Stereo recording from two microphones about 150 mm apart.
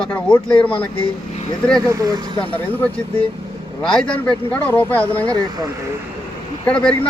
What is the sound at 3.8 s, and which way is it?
Speech, 5° left (ahead or behind).